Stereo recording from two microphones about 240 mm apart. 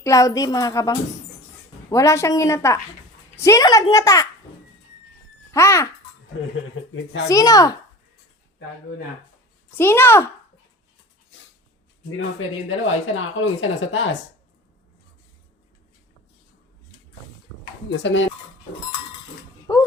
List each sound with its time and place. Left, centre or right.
0.0 s a child's voice: centre
5.5 s a child's voice: centre
6.9 s speech: left
7.3 s a child's voice: centre
9.7 s a child's voice: centre
12.6 s speech: left
18.0 s speech: left
19.7 s a sound: centre